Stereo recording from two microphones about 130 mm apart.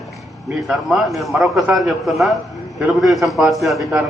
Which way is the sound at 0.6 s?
Centre (ahead or behind).